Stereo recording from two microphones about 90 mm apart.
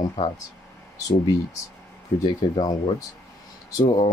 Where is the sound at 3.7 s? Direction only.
45° left (ahead or behind).